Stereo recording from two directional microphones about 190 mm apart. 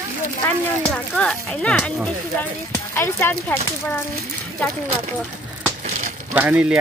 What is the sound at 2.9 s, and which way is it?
Speech, 10° left (ahead or behind).